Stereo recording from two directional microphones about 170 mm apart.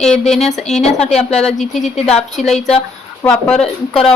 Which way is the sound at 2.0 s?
35° left (ahead or behind).